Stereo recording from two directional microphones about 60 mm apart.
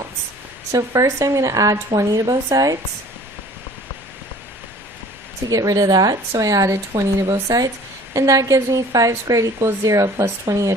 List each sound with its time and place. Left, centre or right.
0.7 s a woman's voice: right
5.5 s a woman's voice: right
8.1 s a woman's voice: right